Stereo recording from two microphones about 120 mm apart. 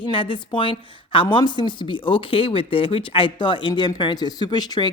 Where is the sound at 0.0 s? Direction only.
45° left (ahead or behind).